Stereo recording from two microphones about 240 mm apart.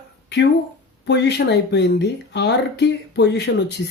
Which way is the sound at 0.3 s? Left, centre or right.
Left.